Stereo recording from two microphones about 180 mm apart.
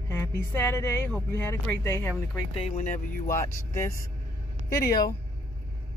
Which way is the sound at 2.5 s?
40° left (ahead or behind).